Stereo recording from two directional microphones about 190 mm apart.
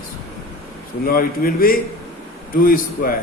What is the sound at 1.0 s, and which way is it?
A man's voice, 50° left (ahead or behind).